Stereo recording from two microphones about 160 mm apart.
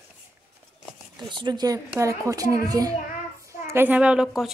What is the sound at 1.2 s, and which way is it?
A child's voice, 30° right (ahead or behind).